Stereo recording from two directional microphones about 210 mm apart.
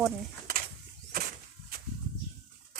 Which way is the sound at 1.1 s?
45° right (ahead or behind).